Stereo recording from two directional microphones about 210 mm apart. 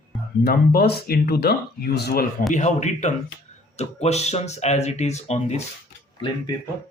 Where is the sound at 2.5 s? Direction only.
35° left (ahead or behind).